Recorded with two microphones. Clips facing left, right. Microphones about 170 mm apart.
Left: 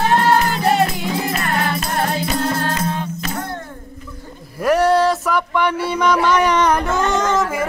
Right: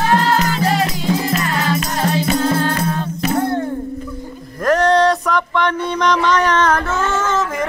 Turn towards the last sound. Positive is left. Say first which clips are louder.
# left 1 dB
turn(degrees=15)  # may be behind; listen again after turning